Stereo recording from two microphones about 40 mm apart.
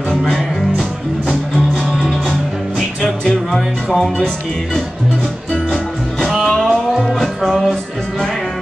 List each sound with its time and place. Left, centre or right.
0.1 s music: centre
2.0 s music: centre
3.0 s music: centre
3.9 s speech: centre
6.6 s music: centre